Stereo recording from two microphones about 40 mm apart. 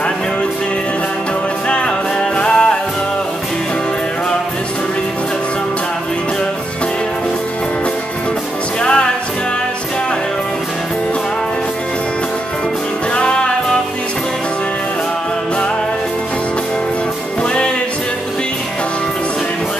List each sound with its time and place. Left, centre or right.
2.3 s music: left
8.8 s music: left
13.1 s music: left